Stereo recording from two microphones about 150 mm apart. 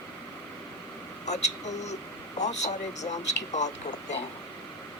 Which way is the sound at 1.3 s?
50° left (ahead or behind).